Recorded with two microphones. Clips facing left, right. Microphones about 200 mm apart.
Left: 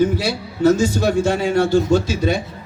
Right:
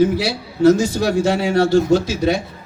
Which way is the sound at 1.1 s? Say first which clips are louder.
Right 2 dB; 55° left (ahead or behind).